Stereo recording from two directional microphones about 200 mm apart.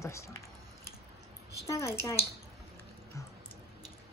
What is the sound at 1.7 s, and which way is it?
Speech, 15° left (ahead or behind).